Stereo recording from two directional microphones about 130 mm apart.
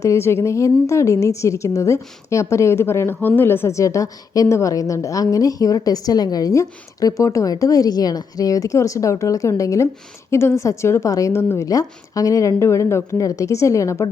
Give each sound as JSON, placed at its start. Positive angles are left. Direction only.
{"t": 0.0, "sound": "a woman's voice", "side_deg": 20}